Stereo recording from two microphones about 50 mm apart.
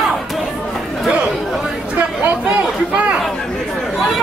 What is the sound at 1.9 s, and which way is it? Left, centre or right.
Chatter, right.